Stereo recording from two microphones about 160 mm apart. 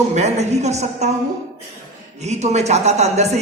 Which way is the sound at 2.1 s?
45° right (ahead or behind).